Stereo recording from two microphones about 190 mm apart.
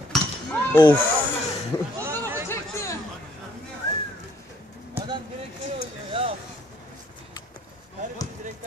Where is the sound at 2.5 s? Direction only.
15° left (ahead or behind).